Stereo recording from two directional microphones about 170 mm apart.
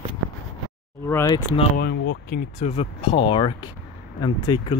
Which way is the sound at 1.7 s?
65° left (ahead or behind).